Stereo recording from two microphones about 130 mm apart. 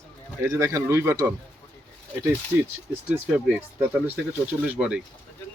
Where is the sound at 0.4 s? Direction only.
25° right (ahead or behind).